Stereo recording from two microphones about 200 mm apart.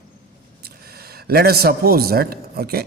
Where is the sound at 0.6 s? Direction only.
50° right (ahead or behind).